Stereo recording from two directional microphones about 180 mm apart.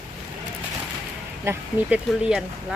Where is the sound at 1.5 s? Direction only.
15° right (ahead or behind).